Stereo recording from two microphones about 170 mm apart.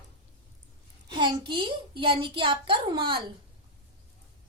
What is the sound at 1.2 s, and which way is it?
A child's voice, 30° right (ahead or behind).